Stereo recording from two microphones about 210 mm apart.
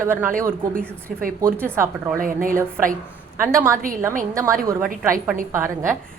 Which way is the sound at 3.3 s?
10° right (ahead or behind).